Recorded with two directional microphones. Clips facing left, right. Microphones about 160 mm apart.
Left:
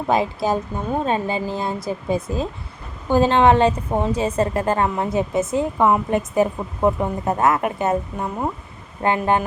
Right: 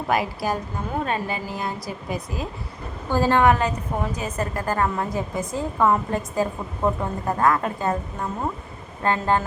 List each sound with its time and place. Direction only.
0.1 s a woman's voice: 25° left (ahead or behind)